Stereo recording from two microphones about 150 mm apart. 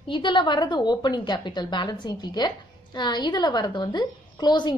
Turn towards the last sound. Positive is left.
turn(degrees=30)  # may be behind; listen again after turning